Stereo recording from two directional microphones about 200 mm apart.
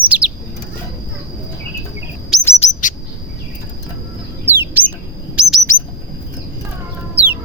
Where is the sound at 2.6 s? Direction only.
40° left (ahead or behind).